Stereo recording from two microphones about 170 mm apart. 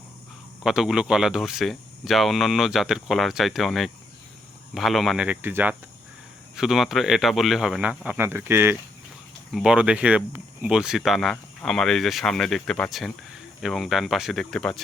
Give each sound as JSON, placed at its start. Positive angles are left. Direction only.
{"t": 0.6, "sound": "speech", "side_deg": 0}
{"t": 9.5, "sound": "speech", "side_deg": 0}